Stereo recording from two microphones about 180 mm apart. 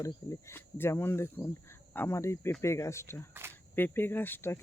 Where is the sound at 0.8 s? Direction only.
15° left (ahead or behind).